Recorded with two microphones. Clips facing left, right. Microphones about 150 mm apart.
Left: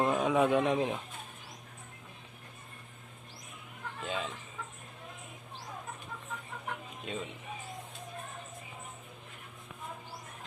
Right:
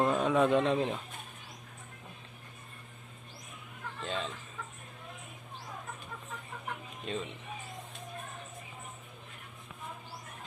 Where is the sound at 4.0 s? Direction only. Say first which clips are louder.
Even; 10° left (ahead or behind).